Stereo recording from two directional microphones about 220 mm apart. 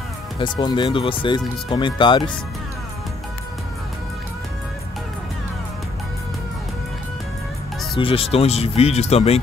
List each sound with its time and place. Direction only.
0.4 s speech: 20° left (ahead or behind)
8.0 s speech: 25° left (ahead or behind)